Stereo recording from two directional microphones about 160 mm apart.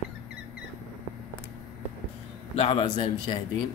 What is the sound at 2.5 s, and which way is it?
Speech, 40° left (ahead or behind).